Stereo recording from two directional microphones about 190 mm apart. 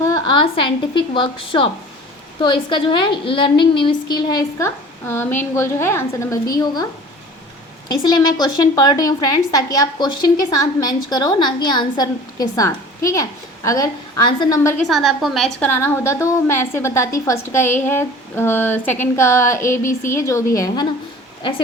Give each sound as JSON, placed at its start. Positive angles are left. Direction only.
{"t": 0.0, "sound": "a woman's voice", "side_deg": 25}
{"t": 8.0, "sound": "a woman's voice", "side_deg": 20}
{"t": 14.8, "sound": "a woman's voice", "side_deg": 0}
{"t": 15.8, "sound": "a woman's voice", "side_deg": 10}